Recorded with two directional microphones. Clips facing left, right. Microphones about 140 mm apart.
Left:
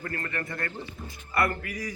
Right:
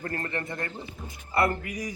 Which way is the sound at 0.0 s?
30° right (ahead or behind).